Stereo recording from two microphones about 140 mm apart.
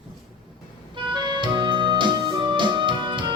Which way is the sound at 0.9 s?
35° right (ahead or behind).